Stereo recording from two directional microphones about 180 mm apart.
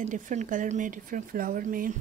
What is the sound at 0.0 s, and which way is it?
Speech, 45° right (ahead or behind).